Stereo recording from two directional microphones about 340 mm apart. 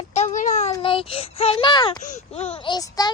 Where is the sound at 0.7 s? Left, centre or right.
Centre.